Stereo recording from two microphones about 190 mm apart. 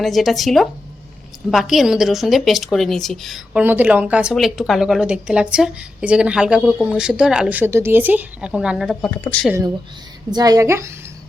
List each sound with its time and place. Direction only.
0.0 s a woman's voice: centre (ahead or behind)
9.5 s a woman's voice: 15° right (ahead or behind)